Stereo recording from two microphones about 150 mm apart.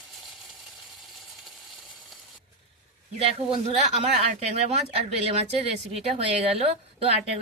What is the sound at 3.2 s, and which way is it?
A woman's voice, 40° right (ahead or behind).